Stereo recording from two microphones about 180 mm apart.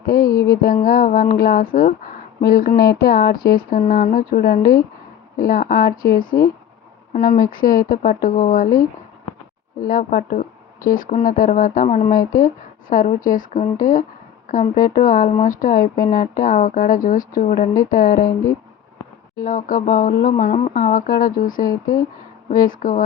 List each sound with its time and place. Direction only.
0.0 s a sound: 55° left (ahead or behind)
0.3 s a sound: 20° left (ahead or behind)
0.9 s speech: 50° left (ahead or behind)
9.8 s speech: 50° left (ahead or behind)
12.9 s speech: 50° left (ahead or behind)
20.7 s speech: 50° left (ahead or behind)